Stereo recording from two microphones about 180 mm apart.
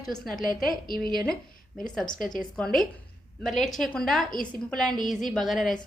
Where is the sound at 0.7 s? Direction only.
55° left (ahead or behind).